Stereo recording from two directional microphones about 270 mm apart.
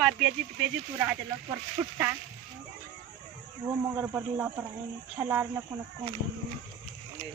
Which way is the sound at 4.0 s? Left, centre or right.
Centre.